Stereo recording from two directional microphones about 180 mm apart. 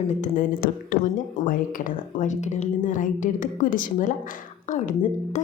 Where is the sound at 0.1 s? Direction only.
45° left (ahead or behind).